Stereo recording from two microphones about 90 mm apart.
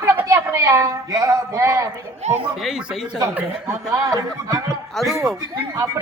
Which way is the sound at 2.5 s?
5° right (ahead or behind).